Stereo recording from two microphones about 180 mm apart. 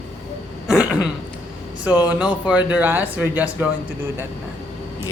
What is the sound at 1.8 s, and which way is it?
Speech, 10° right (ahead or behind).